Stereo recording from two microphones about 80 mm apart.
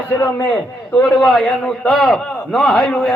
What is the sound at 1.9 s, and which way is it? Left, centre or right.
A man's voice, centre.